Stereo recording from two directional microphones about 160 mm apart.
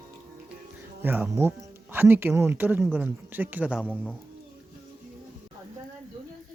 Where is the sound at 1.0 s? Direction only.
10° right (ahead or behind).